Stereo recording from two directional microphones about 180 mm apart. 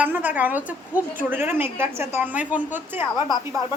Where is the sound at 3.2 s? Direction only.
25° left (ahead or behind).